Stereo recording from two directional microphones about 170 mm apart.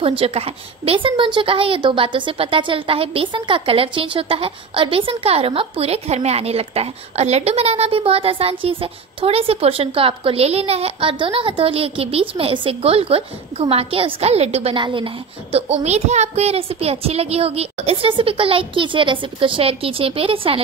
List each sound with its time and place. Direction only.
0.0 s a woman's voice: 35° right (ahead or behind)
15.5 s a woman's voice: 40° right (ahead or behind)